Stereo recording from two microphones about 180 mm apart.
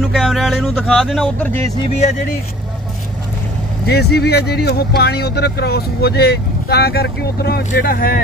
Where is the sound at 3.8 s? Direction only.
65° left (ahead or behind).